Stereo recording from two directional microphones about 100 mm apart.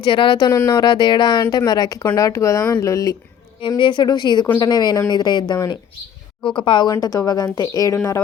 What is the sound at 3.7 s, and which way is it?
Speech, 55° left (ahead or behind).